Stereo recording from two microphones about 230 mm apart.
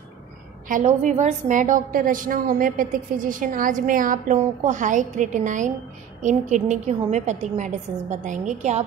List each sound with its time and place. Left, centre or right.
0.7 s a woman's voice: right